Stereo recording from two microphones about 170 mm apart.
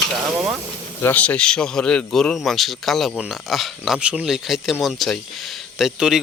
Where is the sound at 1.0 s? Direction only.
10° left (ahead or behind).